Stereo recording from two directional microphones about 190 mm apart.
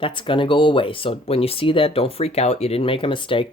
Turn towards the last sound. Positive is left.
turn(degrees=25)  # may be behind; listen again after turning